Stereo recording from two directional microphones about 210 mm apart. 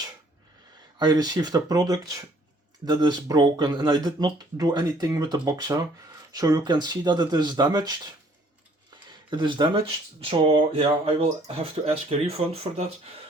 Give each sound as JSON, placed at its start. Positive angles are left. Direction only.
{"t": 0.9, "sound": "speech", "side_deg": -20}
{"t": 9.3, "sound": "speech", "side_deg": -20}